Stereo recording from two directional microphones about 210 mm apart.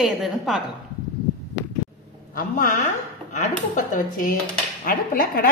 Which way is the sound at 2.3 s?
40° left (ahead or behind).